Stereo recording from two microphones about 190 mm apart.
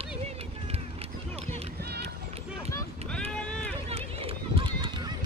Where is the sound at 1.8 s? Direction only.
60° right (ahead or behind).